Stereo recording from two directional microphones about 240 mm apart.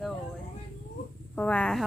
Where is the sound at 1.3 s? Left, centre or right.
Centre.